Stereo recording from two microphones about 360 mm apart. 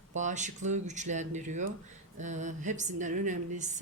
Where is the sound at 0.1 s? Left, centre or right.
Centre.